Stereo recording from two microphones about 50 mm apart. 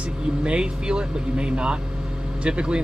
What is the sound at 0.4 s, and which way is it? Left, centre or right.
Speech, centre.